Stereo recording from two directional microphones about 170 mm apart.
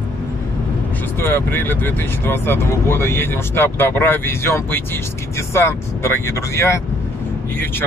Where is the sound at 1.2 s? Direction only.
15° left (ahead or behind).